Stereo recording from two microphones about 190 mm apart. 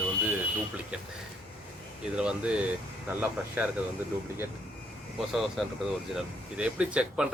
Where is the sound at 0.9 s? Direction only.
5° right (ahead or behind).